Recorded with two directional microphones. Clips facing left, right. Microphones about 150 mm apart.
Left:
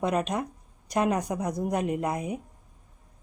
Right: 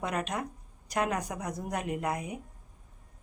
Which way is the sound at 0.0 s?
20° left (ahead or behind).